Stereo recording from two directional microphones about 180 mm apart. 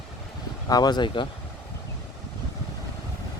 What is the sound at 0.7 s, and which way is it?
Speech, 25° left (ahead or behind).